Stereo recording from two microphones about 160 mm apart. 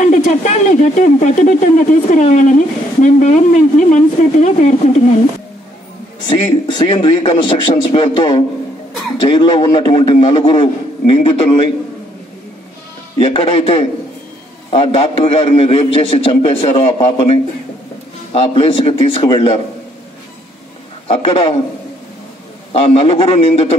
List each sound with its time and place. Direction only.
0.0 s speech: 50° left (ahead or behind)
6.2 s a man's voice: 30° left (ahead or behind)
13.2 s a man's voice: 35° left (ahead or behind)
21.1 s a man's voice: 35° left (ahead or behind)
22.7 s a man's voice: 35° left (ahead or behind)